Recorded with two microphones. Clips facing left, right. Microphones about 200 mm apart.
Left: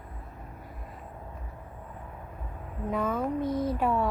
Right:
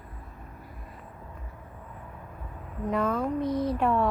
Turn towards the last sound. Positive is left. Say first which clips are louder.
# right 2 dB
turn(degrees=5)  # may be behind; listen again after turning